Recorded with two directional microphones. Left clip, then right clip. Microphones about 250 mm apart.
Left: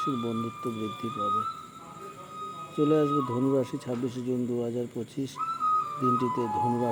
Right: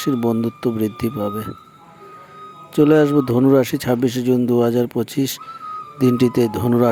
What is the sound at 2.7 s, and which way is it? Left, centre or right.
Speech, right.